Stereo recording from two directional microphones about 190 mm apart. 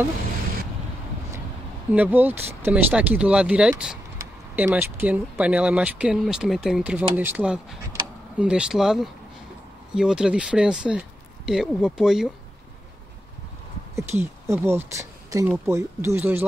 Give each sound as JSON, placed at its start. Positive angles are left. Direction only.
{"t": 1.9, "sound": "speech", "side_deg": -10}
{"t": 13.9, "sound": "speech", "side_deg": -15}